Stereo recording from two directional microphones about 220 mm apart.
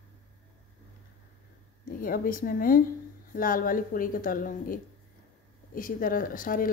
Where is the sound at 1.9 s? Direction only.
40° left (ahead or behind).